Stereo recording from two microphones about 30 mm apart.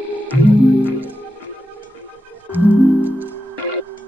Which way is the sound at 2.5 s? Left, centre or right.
Right.